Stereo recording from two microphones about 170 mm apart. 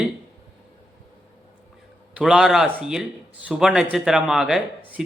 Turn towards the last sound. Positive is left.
turn(degrees=-5)  # may be behind; listen again after turning